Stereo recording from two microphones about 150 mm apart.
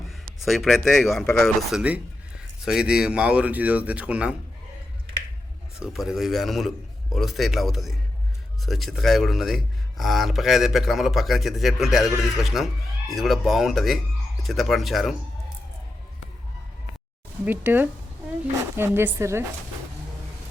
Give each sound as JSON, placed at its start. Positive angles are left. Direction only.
{"t": 0.1, "sound": "a man's voice", "side_deg": 0}
{"t": 5.8, "sound": "a man's voice", "side_deg": -5}
{"t": 17.4, "sound": "speech", "side_deg": -10}